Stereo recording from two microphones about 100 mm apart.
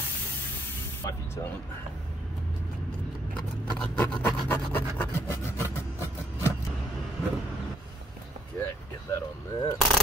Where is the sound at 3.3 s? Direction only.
10° left (ahead or behind).